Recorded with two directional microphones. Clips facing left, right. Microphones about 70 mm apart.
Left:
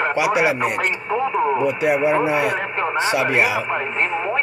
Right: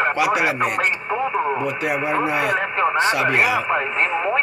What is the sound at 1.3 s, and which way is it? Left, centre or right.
Radio, right.